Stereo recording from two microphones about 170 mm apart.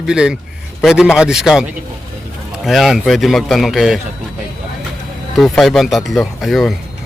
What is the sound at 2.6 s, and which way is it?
Speech, centre (ahead or behind).